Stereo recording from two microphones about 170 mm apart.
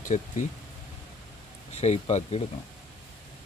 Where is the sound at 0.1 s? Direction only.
40° left (ahead or behind).